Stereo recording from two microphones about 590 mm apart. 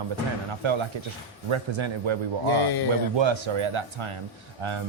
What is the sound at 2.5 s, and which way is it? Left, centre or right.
Speech, left.